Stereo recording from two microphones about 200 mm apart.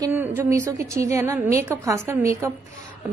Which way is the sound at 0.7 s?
15° right (ahead or behind).